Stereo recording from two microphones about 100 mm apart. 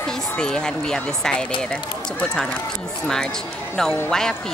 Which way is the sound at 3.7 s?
5° left (ahead or behind).